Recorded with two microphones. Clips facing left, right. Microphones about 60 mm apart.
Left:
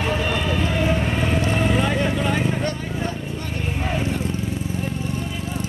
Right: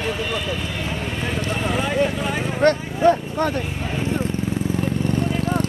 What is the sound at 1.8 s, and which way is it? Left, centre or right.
Vehicle, centre.